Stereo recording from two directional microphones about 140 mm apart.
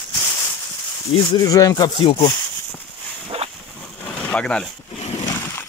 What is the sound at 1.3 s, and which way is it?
Speech, 25° left (ahead or behind).